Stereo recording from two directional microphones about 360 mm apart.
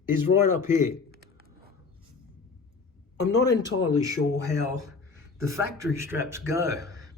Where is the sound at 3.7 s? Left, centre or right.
Left.